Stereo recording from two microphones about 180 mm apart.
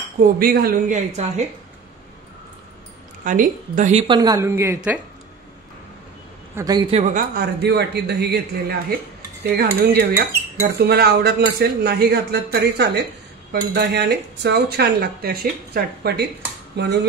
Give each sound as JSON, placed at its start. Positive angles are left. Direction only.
{"t": 0.2, "sound": "a woman's voice", "side_deg": -55}
{"t": 3.3, "sound": "a woman's voice", "side_deg": -45}
{"t": 4.1, "sound": "a woman's voice", "side_deg": -20}
{"t": 6.5, "sound": "a man's voice", "side_deg": -20}
{"t": 6.9, "sound": "speech", "side_deg": -40}
{"t": 16.8, "sound": "dishes", "side_deg": -70}